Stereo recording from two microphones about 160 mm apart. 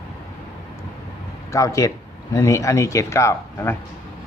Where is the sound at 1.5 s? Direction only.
20° left (ahead or behind).